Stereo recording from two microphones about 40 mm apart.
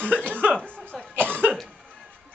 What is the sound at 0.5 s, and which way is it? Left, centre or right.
Cough, left.